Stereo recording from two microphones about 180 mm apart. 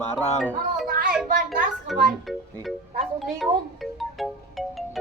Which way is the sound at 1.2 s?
50° right (ahead or behind).